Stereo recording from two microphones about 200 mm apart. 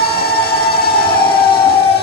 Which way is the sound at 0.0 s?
50° left (ahead or behind).